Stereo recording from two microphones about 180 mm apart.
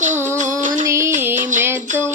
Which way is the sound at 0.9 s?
15° right (ahead or behind).